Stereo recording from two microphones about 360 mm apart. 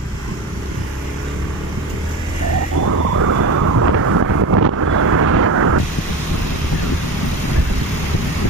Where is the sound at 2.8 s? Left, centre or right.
Right.